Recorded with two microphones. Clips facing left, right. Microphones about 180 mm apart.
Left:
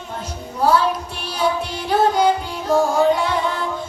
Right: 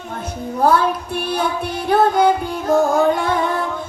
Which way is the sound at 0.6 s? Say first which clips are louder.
Right 1 dB; 55° right (ahead or behind).